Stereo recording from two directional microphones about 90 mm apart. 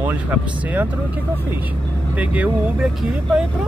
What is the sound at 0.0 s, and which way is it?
Speech, 20° right (ahead or behind).